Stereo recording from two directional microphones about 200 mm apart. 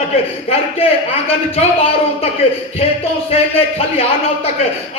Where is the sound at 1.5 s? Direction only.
30° left (ahead or behind).